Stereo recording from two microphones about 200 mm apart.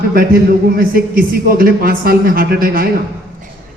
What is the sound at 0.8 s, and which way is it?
A man's voice, 45° right (ahead or behind).